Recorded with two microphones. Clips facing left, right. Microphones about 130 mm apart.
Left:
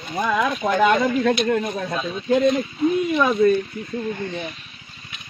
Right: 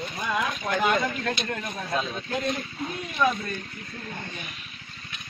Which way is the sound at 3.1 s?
90° left.